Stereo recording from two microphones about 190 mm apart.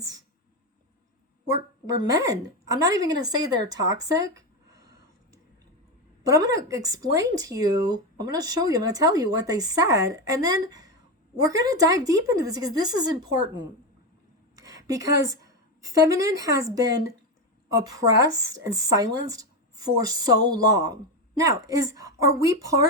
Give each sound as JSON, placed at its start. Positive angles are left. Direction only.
{"t": 2.0, "sound": "speech", "side_deg": -20}
{"t": 6.2, "sound": "a woman's voice", "side_deg": -15}
{"t": 18.2, "sound": "speech", "side_deg": -20}